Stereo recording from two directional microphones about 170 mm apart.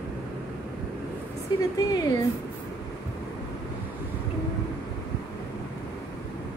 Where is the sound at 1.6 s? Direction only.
20° left (ahead or behind).